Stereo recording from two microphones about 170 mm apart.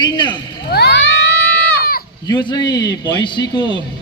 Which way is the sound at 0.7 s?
70° left (ahead or behind).